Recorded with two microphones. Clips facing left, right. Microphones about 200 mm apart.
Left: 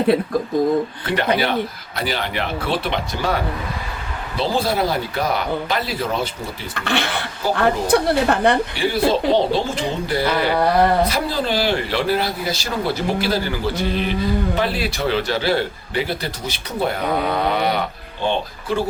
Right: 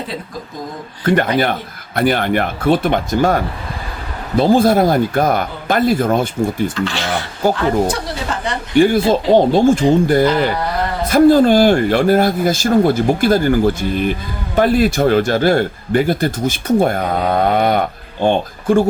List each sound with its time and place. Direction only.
1.0 s speech: 50° right (ahead or behind)
6.7 s a woman's voice: 60° left (ahead or behind)
8.7 s speech: 50° right (ahead or behind)